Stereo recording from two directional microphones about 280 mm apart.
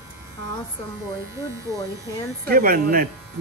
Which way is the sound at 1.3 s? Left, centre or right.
Centre.